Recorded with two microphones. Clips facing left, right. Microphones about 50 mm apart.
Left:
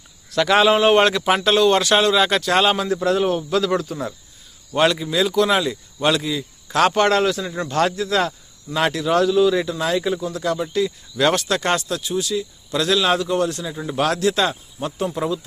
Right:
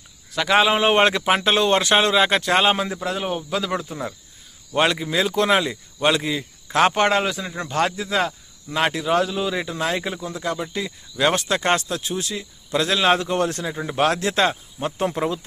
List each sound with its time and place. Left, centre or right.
0.3 s a man's voice: centre
0.7 s speech: centre
3.0 s a man's voice: centre
9.7 s speech: right
13.7 s speech: right